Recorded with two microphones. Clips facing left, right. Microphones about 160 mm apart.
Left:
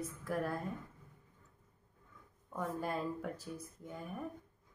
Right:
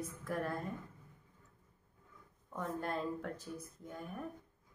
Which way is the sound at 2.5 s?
5° left (ahead or behind).